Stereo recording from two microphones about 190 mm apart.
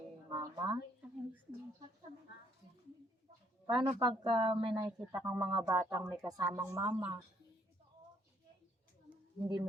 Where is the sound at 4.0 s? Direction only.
25° right (ahead or behind).